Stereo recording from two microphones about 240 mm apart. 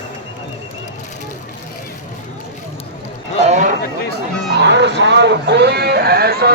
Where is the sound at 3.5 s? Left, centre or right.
Right.